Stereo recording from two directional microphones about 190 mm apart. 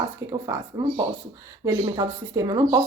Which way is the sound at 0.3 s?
20° right (ahead or behind).